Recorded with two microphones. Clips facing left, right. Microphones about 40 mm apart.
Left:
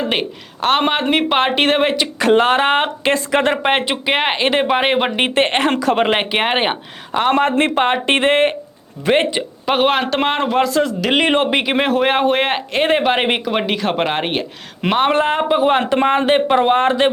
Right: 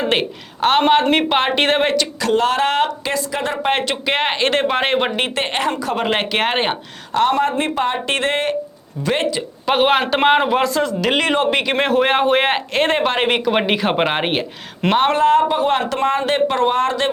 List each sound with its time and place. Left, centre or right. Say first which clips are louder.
0.1 s speech: right 1 dB; centre
2.1 s speech: left 7 dB; left
3.6 s speech: left 2 dB; left; by 5.1 s centre
5.1 s speech: left 4 dB; left
5.7 s speech: left 5 dB; left
6.1 s speech: left 2 dB; centre
7.3 s speech: left 7 dB; left
9.6 s speech: right 1 dB; centre
11.2 s speech: left 4 dB; left
11.5 s speech: even; centre
13.5 s speech: right 1 dB; centre
14.8 s speech: even; centre
15.1 s speech: right 1 dB; left